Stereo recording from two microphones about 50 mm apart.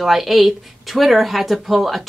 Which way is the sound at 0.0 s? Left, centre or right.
Centre.